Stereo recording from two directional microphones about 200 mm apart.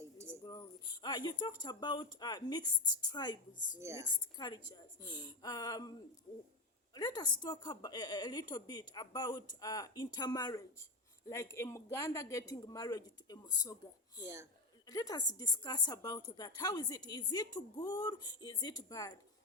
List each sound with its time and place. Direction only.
0.0 s music: 15° right (ahead or behind)
0.4 s speech: 20° left (ahead or behind)
3.8 s a woman's voice: 15° right (ahead or behind)
4.4 s a woman's voice: 20° left (ahead or behind)
6.9 s a woman's voice: 20° left (ahead or behind)
14.8 s a woman's voice: 20° left (ahead or behind)